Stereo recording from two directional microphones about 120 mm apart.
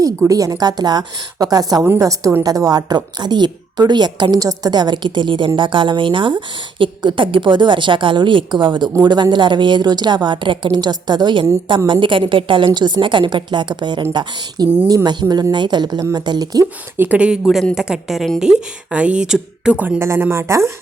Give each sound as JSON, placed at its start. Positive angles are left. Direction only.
{"t": 0.0, "sound": "a woman's voice", "side_deg": -30}
{"t": 17.0, "sound": "speech", "side_deg": -10}